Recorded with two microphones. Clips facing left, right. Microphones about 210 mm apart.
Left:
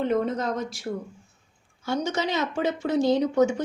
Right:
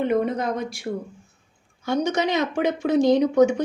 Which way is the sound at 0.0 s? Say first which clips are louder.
Right 2 dB; 15° right (ahead or behind).